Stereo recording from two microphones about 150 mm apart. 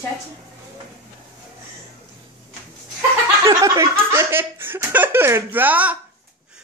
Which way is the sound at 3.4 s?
25° right (ahead or behind).